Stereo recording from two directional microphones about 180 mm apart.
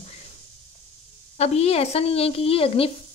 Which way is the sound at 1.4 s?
35° left (ahead or behind).